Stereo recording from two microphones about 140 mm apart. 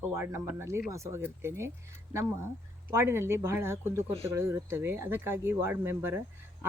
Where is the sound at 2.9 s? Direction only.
20° right (ahead or behind).